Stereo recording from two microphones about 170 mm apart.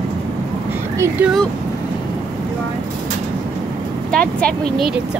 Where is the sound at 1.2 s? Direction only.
10° right (ahead or behind).